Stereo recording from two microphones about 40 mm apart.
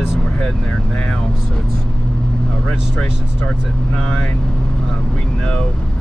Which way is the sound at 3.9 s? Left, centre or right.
Centre.